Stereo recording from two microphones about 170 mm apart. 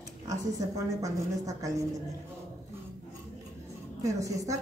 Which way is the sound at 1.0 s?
20° right (ahead or behind).